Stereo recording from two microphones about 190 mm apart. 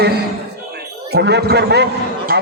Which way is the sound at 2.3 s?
55° right (ahead or behind).